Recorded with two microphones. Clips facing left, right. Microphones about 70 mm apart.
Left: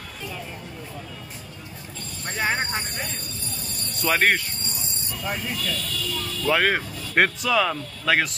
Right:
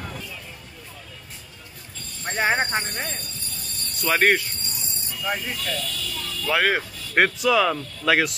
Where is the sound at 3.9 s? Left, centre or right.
Centre.